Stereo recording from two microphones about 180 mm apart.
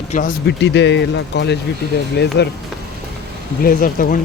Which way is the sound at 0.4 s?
70° left (ahead or behind).